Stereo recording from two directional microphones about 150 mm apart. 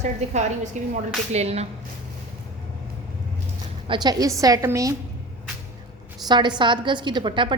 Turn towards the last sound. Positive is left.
turn(degrees=-35)  # may be behind; listen again after turning